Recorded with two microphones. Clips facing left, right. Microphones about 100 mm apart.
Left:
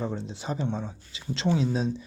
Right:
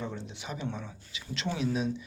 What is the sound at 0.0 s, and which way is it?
Speech, 35° left (ahead or behind).